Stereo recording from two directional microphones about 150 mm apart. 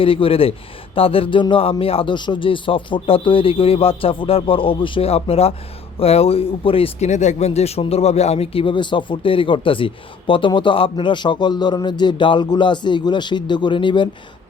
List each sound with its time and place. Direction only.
0.0 s speech: 35° left (ahead or behind)